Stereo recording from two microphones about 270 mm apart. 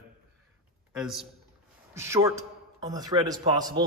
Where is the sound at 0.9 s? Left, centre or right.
Centre.